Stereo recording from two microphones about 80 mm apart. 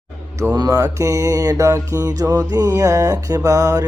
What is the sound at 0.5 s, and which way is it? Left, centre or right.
Mantra, right.